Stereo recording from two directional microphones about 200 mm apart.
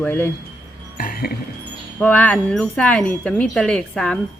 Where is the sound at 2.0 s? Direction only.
5° left (ahead or behind).